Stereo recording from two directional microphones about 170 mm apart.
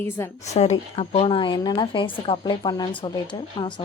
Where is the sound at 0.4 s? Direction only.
40° left (ahead or behind).